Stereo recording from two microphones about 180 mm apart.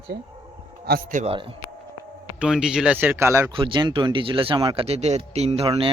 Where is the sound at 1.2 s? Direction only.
30° right (ahead or behind).